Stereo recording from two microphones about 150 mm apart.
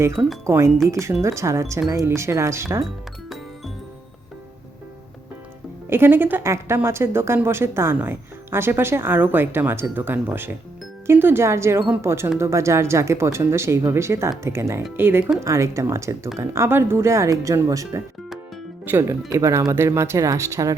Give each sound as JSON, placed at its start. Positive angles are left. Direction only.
{"t": 0.4, "sound": "speech", "side_deg": -20}
{"t": 5.9, "sound": "speech", "side_deg": -15}